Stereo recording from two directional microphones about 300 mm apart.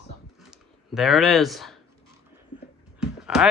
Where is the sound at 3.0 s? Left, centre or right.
Centre.